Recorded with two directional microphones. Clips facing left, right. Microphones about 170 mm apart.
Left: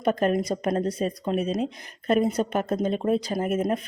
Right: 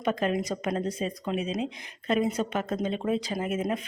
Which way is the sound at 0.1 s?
45° left (ahead or behind).